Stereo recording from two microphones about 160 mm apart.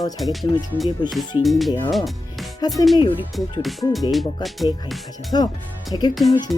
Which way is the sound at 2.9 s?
30° left (ahead or behind).